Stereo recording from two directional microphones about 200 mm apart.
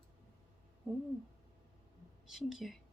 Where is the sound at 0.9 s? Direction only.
5° right (ahead or behind).